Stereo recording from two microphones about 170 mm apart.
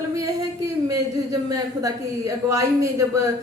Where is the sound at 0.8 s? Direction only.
20° right (ahead or behind).